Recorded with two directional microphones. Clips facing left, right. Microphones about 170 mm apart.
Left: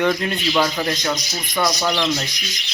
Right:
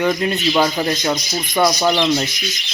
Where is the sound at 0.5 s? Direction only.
20° right (ahead or behind).